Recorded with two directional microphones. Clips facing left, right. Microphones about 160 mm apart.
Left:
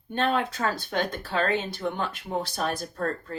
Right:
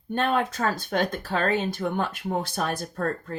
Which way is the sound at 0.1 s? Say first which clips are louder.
Right 1 dB; 50° right (ahead or behind).